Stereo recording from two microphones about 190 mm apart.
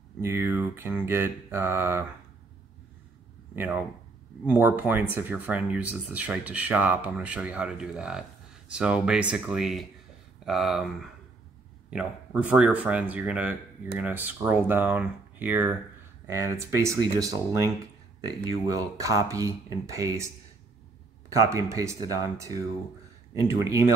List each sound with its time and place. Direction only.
0.2 s speech: 15° right (ahead or behind)
3.5 s speech: 10° right (ahead or behind)
21.3 s speech: 15° right (ahead or behind)